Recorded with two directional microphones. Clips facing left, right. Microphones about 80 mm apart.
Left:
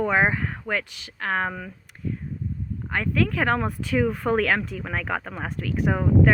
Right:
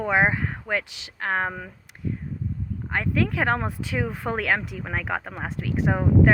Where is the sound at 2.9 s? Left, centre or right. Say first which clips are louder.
Left 1 dB; right.